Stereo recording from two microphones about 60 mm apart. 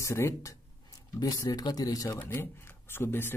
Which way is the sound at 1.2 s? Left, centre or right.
Left.